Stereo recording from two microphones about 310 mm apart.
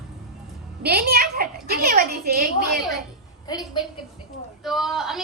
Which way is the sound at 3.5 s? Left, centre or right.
Centre.